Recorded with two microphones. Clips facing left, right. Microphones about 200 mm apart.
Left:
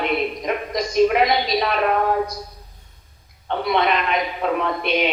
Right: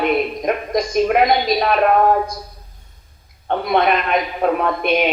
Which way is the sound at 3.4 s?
50° right (ahead or behind).